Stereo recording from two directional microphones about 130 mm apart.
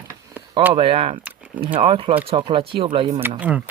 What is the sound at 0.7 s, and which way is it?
Speech, 45° right (ahead or behind).